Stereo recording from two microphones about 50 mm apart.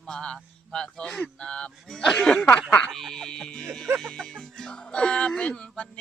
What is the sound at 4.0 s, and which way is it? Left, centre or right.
Speech, centre.